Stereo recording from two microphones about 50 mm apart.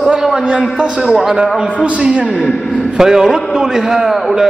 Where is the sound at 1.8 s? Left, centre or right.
Right.